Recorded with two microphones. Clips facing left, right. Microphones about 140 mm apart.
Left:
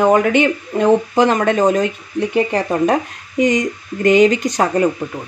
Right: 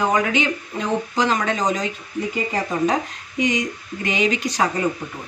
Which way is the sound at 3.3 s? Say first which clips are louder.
Left 6 dB; 50° left (ahead or behind).